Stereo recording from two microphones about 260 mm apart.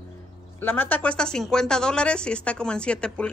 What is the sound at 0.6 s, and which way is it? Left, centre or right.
Speech, centre.